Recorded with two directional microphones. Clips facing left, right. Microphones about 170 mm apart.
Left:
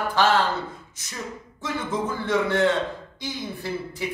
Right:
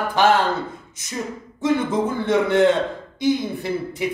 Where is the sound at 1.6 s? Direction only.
20° right (ahead or behind).